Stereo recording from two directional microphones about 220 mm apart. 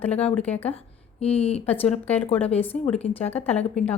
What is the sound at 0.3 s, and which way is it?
Speech, 5° left (ahead or behind).